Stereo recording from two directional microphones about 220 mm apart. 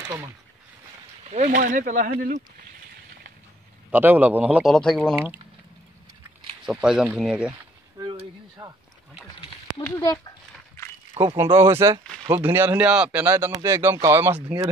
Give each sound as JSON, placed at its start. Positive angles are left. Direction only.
{"t": 0.0, "sound": "speech", "side_deg": -15}
{"t": 1.3, "sound": "speech", "side_deg": -35}
{"t": 3.9, "sound": "a man's voice", "side_deg": -10}
{"t": 6.6, "sound": "speech", "side_deg": 0}
{"t": 8.0, "sound": "a sound", "side_deg": -20}
{"t": 9.8, "sound": "speech", "side_deg": 15}
{"t": 11.2, "sound": "speech", "side_deg": -30}
{"t": 11.5, "sound": "a man's voice", "side_deg": -10}